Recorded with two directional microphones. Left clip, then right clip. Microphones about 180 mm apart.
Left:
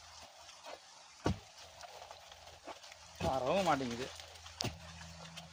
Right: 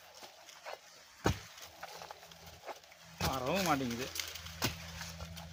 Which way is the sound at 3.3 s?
55° right (ahead or behind).